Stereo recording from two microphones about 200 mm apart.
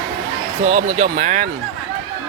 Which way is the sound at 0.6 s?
40° right (ahead or behind).